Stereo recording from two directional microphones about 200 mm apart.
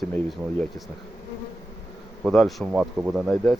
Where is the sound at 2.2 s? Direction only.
Centre (ahead or behind).